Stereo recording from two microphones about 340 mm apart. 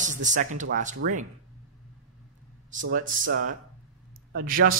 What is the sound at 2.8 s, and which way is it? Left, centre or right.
Speech, right.